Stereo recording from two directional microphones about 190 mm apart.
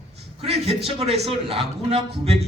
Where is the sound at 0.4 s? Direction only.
35° right (ahead or behind).